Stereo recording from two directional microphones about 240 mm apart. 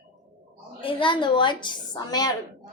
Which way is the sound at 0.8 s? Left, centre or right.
Left.